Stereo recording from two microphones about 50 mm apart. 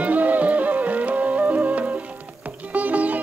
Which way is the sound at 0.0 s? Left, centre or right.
Right.